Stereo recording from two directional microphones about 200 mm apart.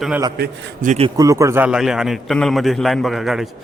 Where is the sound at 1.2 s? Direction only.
15° right (ahead or behind).